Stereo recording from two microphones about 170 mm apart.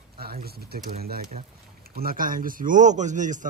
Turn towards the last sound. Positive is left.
turn(degrees=-45)  # may be behind; listen again after turning